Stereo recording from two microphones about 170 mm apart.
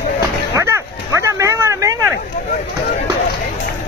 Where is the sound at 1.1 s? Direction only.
20° right (ahead or behind).